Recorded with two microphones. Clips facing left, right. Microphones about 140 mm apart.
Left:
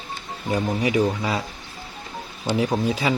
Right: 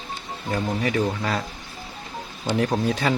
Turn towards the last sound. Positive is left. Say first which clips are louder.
# even
turn(degrees=5)  # may be behind; listen again after turning